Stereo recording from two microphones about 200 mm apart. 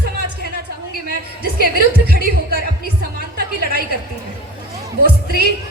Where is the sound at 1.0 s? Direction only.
50° right (ahead or behind).